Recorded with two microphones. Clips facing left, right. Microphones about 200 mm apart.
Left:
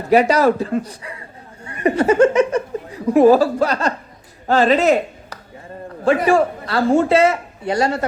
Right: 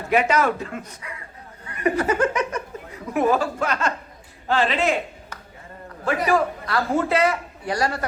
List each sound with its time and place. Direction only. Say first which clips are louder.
0.1 s a man's voice: left 6 dB; 35° left (ahead or behind)
6.2 s a man's voice: left 5 dB; 30° left (ahead or behind)